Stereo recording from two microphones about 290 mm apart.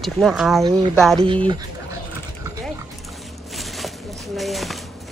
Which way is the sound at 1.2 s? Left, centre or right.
Centre.